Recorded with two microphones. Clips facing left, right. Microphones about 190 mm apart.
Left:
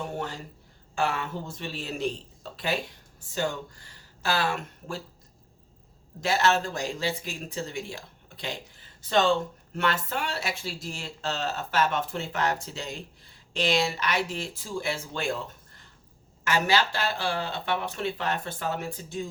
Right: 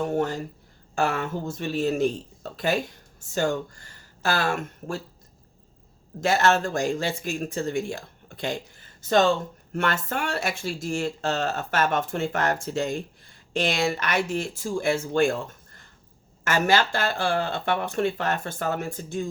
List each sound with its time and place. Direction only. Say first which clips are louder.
0.0 s a sound: right 8 dB; 45° right (ahead or behind)
0.9 s speech: right 3 dB; 45° right (ahead or behind)
6.1 s speech: right 3 dB; 50° right (ahead or behind)